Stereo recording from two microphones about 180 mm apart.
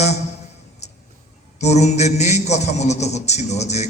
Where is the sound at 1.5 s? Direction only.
40° left (ahead or behind).